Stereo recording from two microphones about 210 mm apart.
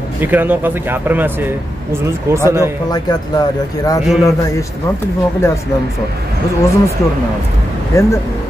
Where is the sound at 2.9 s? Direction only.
20° left (ahead or behind).